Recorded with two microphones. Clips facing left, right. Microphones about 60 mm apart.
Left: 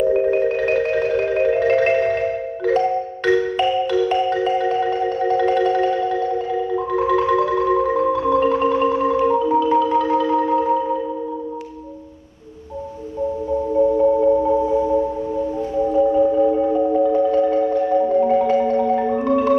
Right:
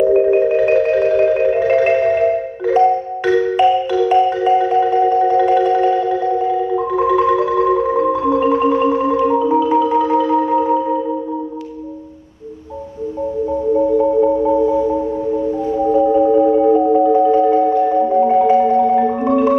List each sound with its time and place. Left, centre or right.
0.1 s marimba: centre
1.4 s music: centre
4.4 s marimba: centre
14.2 s music: right
15.7 s marimba: right